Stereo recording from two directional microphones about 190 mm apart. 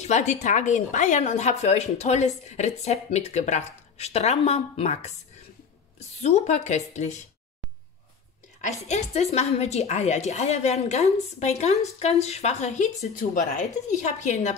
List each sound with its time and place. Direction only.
0.0 s a woman's voice: 35° left (ahead or behind)
8.5 s a woman's voice: 35° left (ahead or behind)